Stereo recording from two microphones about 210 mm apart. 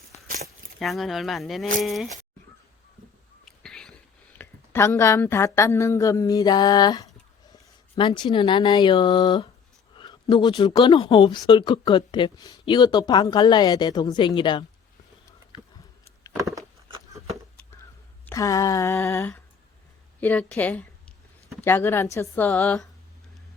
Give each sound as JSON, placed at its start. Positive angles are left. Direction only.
{"t": 0.4, "sound": "speech", "side_deg": 0}
{"t": 3.4, "sound": "a sound", "side_deg": 5}
{"t": 4.4, "sound": "a woman's voice", "side_deg": 10}
{"t": 18.3, "sound": "a woman's voice", "side_deg": 15}